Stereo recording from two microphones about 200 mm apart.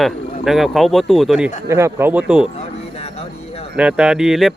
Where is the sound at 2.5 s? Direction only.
30° left (ahead or behind).